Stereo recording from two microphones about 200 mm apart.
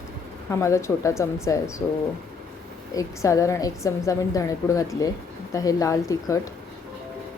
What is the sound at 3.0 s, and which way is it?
A woman's voice, 15° left (ahead or behind).